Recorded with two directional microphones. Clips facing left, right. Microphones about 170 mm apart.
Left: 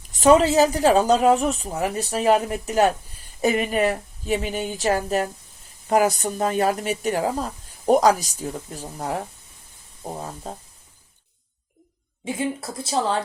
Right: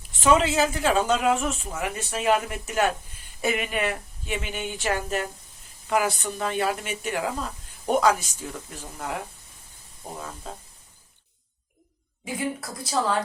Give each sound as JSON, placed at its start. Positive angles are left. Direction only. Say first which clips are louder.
{"t": 0.1, "sound": "speech", "louder": "left 5 dB", "side_deg": 40}
{"t": 12.2, "sound": "speech", "louder": "left 3 dB", "side_deg": 25}